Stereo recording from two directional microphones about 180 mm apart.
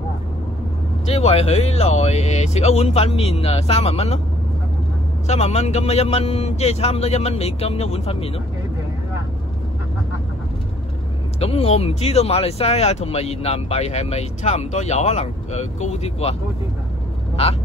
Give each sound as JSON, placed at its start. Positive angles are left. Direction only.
{"t": 1.0, "sound": "speech", "side_deg": 35}
{"t": 5.2, "sound": "speech", "side_deg": 40}
{"t": 11.3, "sound": "speech", "side_deg": 35}
{"t": 17.4, "sound": "speech", "side_deg": 35}